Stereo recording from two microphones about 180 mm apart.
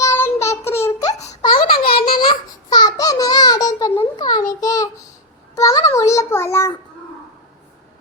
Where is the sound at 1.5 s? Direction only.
55° left (ahead or behind).